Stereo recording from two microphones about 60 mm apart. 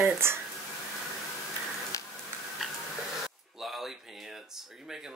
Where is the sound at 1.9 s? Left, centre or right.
Left.